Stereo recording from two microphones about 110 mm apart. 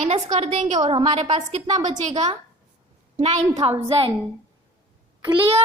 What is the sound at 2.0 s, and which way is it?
A woman's voice, 90° right.